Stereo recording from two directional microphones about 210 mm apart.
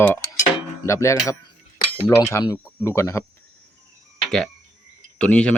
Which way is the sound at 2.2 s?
15° left (ahead or behind).